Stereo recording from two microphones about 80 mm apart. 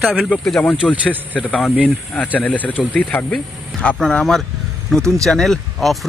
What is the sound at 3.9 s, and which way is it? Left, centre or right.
Speech, centre.